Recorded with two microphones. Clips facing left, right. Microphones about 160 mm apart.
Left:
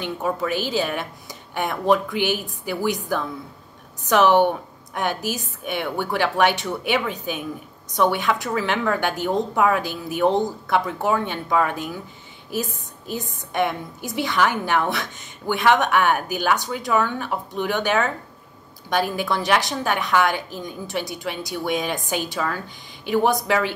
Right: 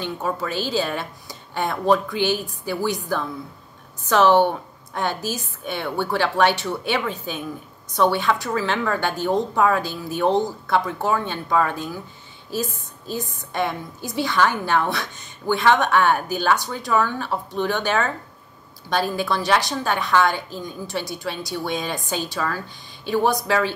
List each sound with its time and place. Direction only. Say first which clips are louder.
0.0 s a woman's voice: left 1 dB; 15° left (ahead or behind)